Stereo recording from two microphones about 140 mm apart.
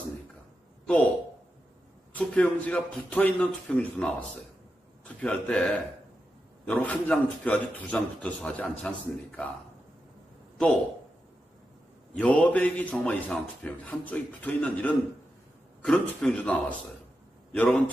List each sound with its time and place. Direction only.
0.8 s a man's voice: 10° left (ahead or behind)
2.1 s a man's voice: 10° left (ahead or behind)
12.1 s a man's voice: 10° left (ahead or behind)